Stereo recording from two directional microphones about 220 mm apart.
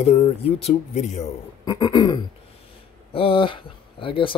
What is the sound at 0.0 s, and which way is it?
Speech, 30° left (ahead or behind).